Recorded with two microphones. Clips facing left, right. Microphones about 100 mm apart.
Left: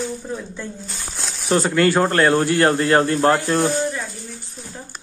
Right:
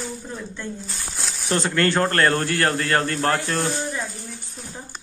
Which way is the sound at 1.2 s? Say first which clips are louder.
Left 5 dB; centre (ahead or behind).